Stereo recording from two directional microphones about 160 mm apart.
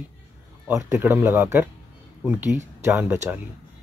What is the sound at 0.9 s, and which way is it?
Speech, 10° right (ahead or behind).